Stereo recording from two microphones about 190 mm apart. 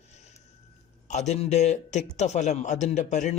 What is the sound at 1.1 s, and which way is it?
A man's voice, 35° left (ahead or behind).